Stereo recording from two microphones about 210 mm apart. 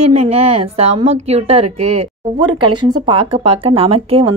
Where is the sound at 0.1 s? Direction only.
30° right (ahead or behind).